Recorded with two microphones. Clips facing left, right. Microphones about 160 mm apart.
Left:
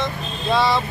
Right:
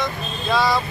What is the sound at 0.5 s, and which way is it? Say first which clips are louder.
Speech: left 1 dB; 25° left (ahead or behind).